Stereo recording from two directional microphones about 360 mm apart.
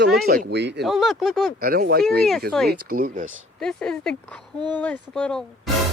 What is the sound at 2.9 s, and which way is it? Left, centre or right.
Speech, right.